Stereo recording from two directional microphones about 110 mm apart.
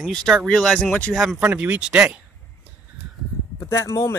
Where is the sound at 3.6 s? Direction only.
25° left (ahead or behind).